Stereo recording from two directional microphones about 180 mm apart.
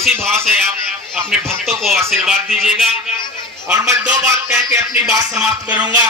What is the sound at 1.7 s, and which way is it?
Speech, centre (ahead or behind).